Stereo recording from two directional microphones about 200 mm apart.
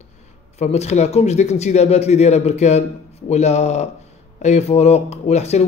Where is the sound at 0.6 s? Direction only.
35° left (ahead or behind).